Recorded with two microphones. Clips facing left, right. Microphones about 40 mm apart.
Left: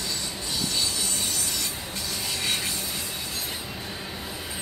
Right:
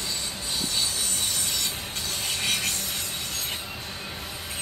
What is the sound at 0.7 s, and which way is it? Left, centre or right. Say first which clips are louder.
Train: left 1 dB; right.